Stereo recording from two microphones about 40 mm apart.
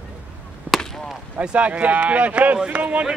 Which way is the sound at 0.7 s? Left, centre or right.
Right.